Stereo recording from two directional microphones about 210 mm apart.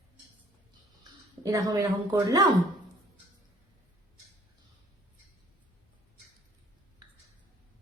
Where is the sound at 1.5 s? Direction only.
15° right (ahead or behind).